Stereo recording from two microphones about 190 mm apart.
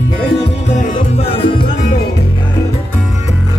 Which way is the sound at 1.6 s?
45° left (ahead or behind).